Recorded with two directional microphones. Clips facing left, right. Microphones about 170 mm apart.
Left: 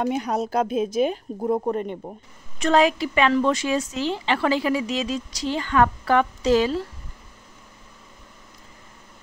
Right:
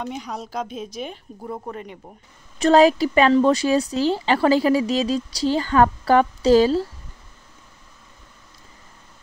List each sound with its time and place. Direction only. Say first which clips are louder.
0.0 s a woman's voice: left 7 dB; 55° left (ahead or behind)
1.4 s speech: left 9 dB; 35° left (ahead or behind)
2.6 s speech: right 5 dB; 35° right (ahead or behind)